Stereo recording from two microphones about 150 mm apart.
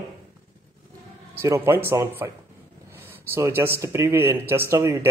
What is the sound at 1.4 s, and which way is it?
Speech, 15° right (ahead or behind).